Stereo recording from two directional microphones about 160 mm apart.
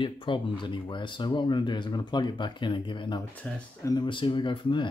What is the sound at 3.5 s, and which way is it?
Speech, 10° left (ahead or behind).